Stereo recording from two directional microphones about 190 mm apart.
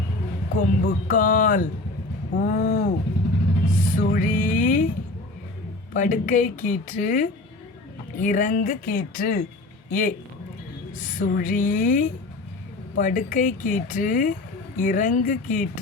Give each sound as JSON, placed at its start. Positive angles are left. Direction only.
{"t": 0.5, "sound": "speech", "side_deg": 45}
{"t": 2.3, "sound": "a sound", "side_deg": 45}
{"t": 3.8, "sound": "music", "side_deg": 40}
{"t": 4.0, "sound": "speech", "side_deg": 45}
{"t": 5.9, "sound": "speech", "side_deg": 40}